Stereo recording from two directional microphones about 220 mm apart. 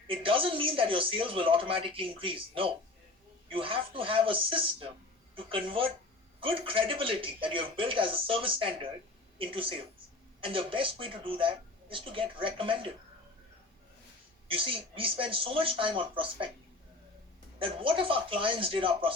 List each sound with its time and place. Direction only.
0.1 s speech: 25° right (ahead or behind)
14.4 s speech: 25° right (ahead or behind)
17.6 s speech: 25° right (ahead or behind)